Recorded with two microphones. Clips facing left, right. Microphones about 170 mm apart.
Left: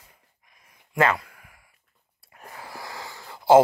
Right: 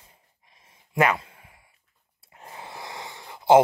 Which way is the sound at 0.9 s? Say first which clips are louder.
Even; 20° right (ahead or behind).